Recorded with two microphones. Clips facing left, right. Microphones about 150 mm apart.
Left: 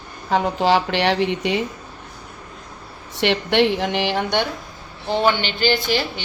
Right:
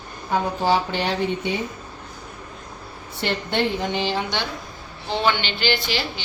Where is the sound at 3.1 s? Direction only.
80° left; by 4.4 s 60° left (ahead or behind).